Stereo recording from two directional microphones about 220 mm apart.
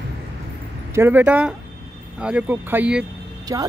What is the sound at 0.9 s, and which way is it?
Speech, 10° right (ahead or behind).